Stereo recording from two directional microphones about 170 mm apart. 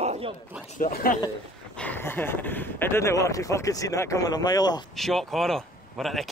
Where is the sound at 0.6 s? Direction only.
50° left (ahead or behind).